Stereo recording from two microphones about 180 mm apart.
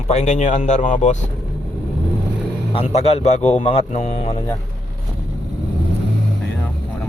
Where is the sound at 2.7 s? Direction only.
35° left (ahead or behind).